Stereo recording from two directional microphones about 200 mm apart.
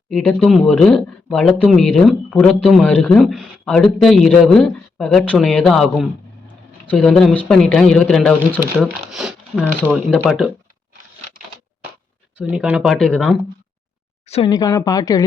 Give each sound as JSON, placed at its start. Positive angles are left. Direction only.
{"t": 0.1, "sound": "speech", "side_deg": 0}
{"t": 12.4, "sound": "speech", "side_deg": -5}
{"t": 14.3, "sound": "speech", "side_deg": 30}
{"t": 14.5, "sound": "speech", "side_deg": 15}